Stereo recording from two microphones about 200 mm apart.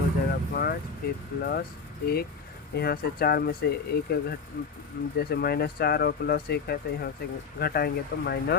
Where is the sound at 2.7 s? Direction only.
50° left (ahead or behind).